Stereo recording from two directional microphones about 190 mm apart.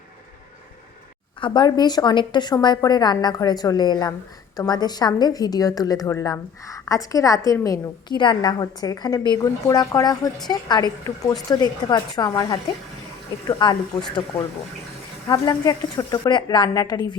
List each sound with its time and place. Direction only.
1.4 s a woman's voice: 25° left (ahead or behind)
15.3 s a woman's voice: 20° left (ahead or behind)